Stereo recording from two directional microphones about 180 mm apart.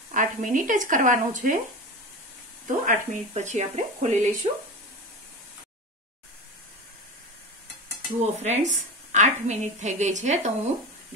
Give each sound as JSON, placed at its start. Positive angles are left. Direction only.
{"t": 0.1, "sound": "speech", "side_deg": -45}
{"t": 2.8, "sound": "a woman's voice", "side_deg": -45}
{"t": 8.2, "sound": "a woman's voice", "side_deg": -40}